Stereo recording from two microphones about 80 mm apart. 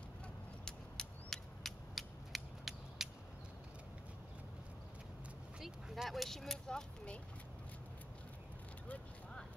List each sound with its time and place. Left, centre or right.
0.7 s mechanisms: centre
5.6 s speech: centre
8.8 s vehicle: centre